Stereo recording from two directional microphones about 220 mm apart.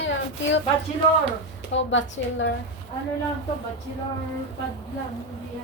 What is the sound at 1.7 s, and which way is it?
Speech, 55° left (ahead or behind).